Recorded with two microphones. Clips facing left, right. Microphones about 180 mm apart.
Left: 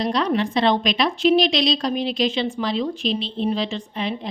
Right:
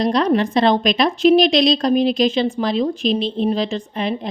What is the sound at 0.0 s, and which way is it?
A woman's voice, 45° right (ahead or behind).